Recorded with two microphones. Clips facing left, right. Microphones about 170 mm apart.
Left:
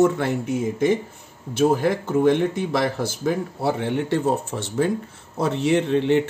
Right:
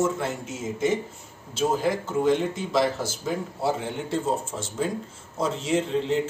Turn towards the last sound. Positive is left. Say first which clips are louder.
# left 5 dB
turn(degrees=65)  # may be behind; listen again after turning